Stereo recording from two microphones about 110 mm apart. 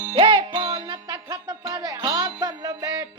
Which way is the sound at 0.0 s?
45° right (ahead or behind).